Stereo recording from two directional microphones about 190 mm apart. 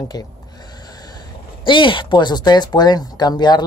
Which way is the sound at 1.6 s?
25° left (ahead or behind).